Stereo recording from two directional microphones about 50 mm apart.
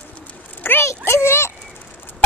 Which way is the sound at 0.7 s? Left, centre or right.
Left.